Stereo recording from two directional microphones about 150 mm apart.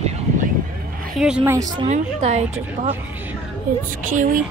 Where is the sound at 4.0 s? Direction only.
60° right (ahead or behind).